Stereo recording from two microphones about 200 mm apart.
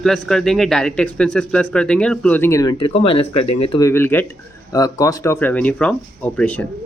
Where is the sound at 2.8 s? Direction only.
30° left (ahead or behind).